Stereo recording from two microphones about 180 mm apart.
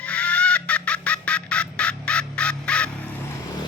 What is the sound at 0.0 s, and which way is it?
Fowl, 5° left (ahead or behind).